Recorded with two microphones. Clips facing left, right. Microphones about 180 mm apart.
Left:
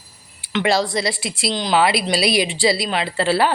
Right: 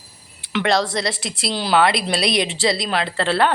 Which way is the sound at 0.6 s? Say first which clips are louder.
Left 1 dB; centre (ahead or behind).